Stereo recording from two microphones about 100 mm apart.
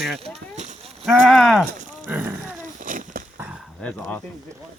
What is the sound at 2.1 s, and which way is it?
Roaring cats, 15° right (ahead or behind).